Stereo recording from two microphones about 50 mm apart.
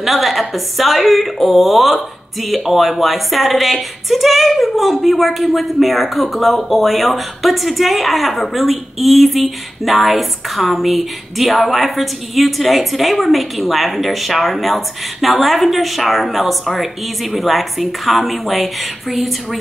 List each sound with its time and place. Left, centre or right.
0.0 s speech: centre